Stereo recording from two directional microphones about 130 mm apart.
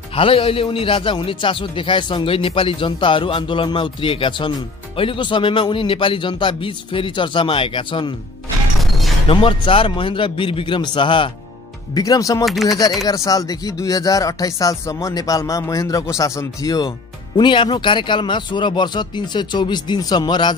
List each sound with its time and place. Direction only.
0.1 s a man's voice: 45° left (ahead or behind)
9.3 s a man's voice: 45° left (ahead or behind)
11.9 s speech: 30° left (ahead or behind)
12.4 s speech: centre (ahead or behind)
13.0 s a man's voice: 25° left (ahead or behind)